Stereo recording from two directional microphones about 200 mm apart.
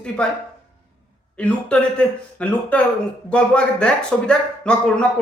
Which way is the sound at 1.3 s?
5° left (ahead or behind).